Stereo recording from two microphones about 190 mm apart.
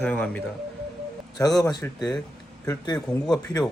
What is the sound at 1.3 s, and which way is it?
Speech, 20° left (ahead or behind).